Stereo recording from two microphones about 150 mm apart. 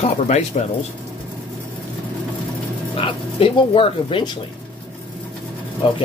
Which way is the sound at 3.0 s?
35° left (ahead or behind).